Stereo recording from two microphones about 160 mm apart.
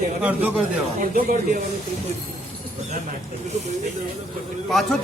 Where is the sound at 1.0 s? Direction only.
55° right (ahead or behind).